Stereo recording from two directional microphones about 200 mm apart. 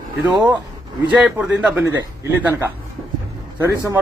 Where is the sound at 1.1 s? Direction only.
5° right (ahead or behind).